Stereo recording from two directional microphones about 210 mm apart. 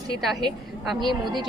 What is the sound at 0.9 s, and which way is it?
Speech, 20° right (ahead or behind).